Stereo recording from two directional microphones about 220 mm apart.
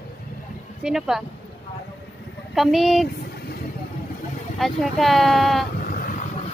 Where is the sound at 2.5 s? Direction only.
Centre (ahead or behind).